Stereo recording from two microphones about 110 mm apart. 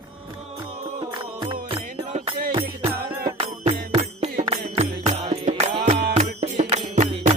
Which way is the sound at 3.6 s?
75° right (ahead or behind).